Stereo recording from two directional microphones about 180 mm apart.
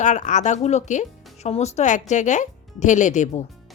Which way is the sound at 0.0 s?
40° left (ahead or behind).